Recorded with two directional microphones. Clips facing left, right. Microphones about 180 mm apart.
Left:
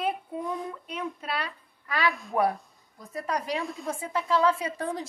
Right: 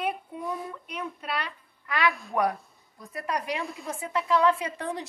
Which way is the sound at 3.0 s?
Centre (ahead or behind).